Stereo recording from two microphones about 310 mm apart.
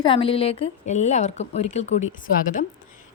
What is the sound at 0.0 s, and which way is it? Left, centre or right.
A woman's voice, centre.